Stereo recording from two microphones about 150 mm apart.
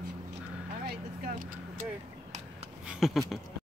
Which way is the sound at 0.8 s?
70° right (ahead or behind).